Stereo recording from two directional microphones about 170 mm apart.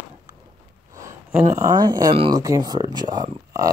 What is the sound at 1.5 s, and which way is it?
Speech, 20° right (ahead or behind).